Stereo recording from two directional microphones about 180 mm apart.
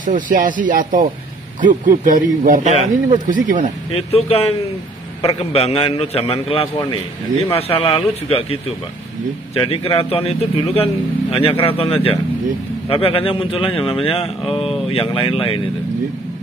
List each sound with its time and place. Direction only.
0.0 s speech: 45° right (ahead or behind)
3.9 s speech: 35° left (ahead or behind)